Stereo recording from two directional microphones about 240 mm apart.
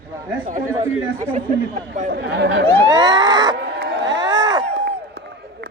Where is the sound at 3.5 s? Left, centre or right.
Right.